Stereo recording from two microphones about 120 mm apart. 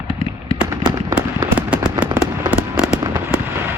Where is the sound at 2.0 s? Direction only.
15° right (ahead or behind).